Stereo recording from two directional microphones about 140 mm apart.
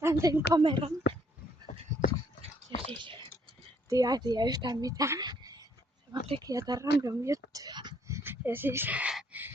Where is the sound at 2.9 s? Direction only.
35° right (ahead or behind).